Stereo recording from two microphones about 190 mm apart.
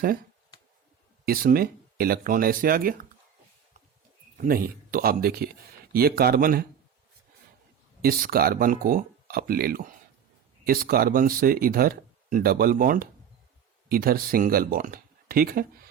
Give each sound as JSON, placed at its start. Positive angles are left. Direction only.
{"t": 1.2, "sound": "speech", "side_deg": -50}
{"t": 4.4, "sound": "speech", "side_deg": -50}
{"t": 8.0, "sound": "speech", "side_deg": -50}